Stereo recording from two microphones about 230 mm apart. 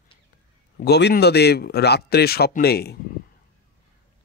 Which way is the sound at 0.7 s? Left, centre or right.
Left.